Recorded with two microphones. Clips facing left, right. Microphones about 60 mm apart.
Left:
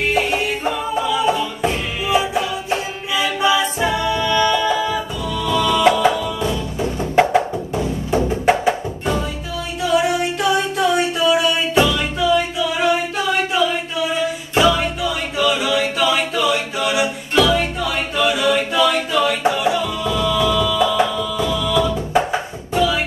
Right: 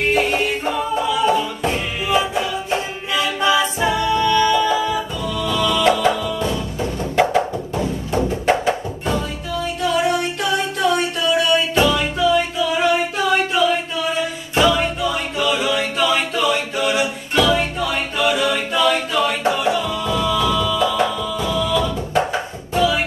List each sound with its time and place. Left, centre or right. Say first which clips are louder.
0.1 s music: right 1 dB; centre
5.6 s music: left 2 dB; centre
5.9 s music: left 1 dB; centre
9.8 s a sound: left 2 dB; centre
11.9 s music: even; centre
13.5 s a sound: right 1 dB; centre
14.5 s music: even; centre
16.0 s a capella: left 1 dB; centre
17.4 s music: left 1 dB; centre
22.8 s music: even; centre